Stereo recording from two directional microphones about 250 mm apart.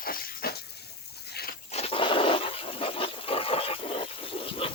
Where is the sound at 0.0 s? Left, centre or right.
Left.